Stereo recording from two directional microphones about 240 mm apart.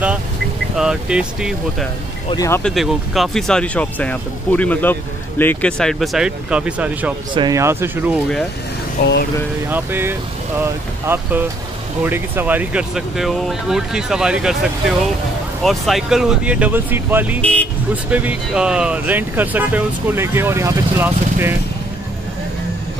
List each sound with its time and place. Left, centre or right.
0.7 s speech: centre
2.2 s speech: centre
2.7 s speech: centre
9.0 s speech: left
9.7 s speech: centre
17.4 s speech: centre
18.1 s speech: centre